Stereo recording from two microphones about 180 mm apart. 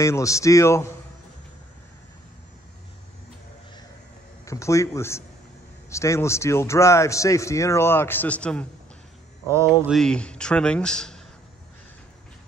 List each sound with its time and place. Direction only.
0.0 s a man's voice: 15° left (ahead or behind)
4.5 s a man's voice: 15° left (ahead or behind)
9.5 s speech: 15° right (ahead or behind)
9.8 s speech: 5° left (ahead or behind)